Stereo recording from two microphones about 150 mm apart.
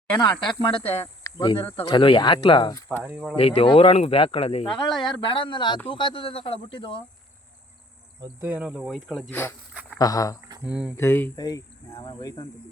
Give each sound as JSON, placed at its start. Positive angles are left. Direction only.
{"t": 0.2, "sound": "speech", "side_deg": 30}
{"t": 3.0, "sound": "cricket", "side_deg": -10}
{"t": 3.3, "sound": "speech", "side_deg": 40}
{"t": 8.2, "sound": "cricket", "side_deg": -15}
{"t": 10.0, "sound": "speech", "side_deg": 25}
{"t": 10.6, "sound": "cricket", "side_deg": -10}
{"t": 10.9, "sound": "speech", "side_deg": 15}